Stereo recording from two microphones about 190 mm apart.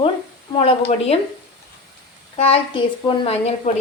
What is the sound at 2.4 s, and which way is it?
A woman's voice, 30° left (ahead or behind).